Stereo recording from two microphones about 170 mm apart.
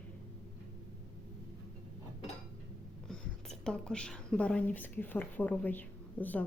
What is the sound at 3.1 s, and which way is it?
A woman's voice, 5° left (ahead or behind).